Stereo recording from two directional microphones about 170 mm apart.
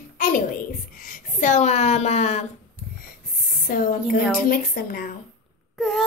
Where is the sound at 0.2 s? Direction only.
55° left (ahead or behind).